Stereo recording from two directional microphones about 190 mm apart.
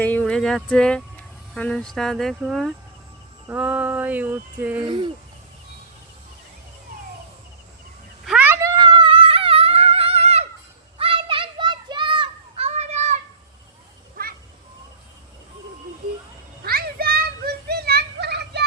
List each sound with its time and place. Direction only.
0.0 s speech: 10° left (ahead or behind)
3.5 s a sound: 5° right (ahead or behind)
4.8 s speech: 25° right (ahead or behind)
8.2 s a sound: 5° right (ahead or behind); by 10.4 s 35° right (ahead or behind)
10.9 s children playing: 30° right (ahead or behind)
16.6 s children playing: 55° right (ahead or behind)